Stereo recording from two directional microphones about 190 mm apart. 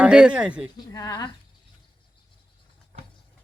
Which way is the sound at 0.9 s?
20° left (ahead or behind).